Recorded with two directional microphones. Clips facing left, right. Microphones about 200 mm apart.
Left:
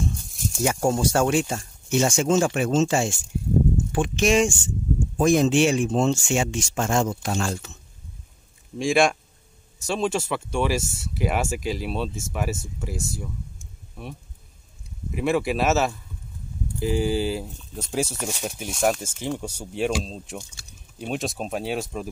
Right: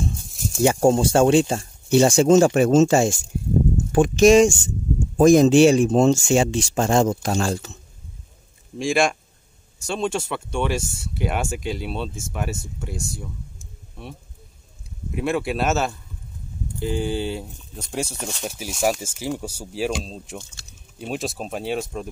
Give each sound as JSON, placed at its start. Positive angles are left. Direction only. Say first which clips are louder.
{"t": 0.6, "sound": "speech", "louder": "right 6 dB", "side_deg": -30}
{"t": 8.7, "sound": "speech", "louder": "left 1 dB", "side_deg": 0}
{"t": 15.0, "sound": "speech", "louder": "left 1 dB", "side_deg": 0}